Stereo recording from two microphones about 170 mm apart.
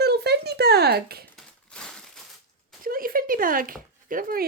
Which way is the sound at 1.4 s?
5° left (ahead or behind).